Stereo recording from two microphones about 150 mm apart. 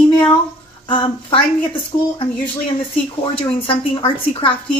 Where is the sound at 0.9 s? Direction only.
35° left (ahead or behind).